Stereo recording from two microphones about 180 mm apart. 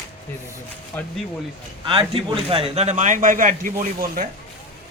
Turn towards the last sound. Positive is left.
turn(degrees=-50)  # may be behind; listen again after turning